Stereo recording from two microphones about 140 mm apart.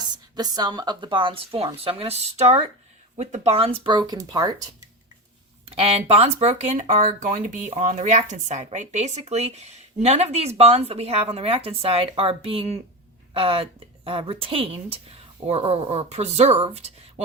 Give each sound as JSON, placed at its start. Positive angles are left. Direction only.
{"t": 0.3, "sound": "speech", "side_deg": -30}
{"t": 5.6, "sound": "speech", "side_deg": -45}
{"t": 16.7, "sound": "a sound", "side_deg": -50}